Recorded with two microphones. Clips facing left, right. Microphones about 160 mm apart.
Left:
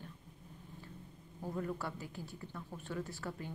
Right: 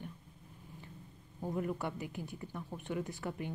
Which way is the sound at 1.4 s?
15° right (ahead or behind).